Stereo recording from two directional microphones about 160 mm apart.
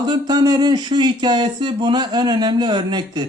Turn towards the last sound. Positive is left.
turn(degrees=-25)  # may be behind; listen again after turning